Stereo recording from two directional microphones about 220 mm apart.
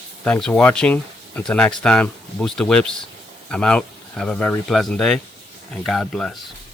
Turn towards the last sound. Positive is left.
turn(degrees=0)  # may be behind; listen again after turning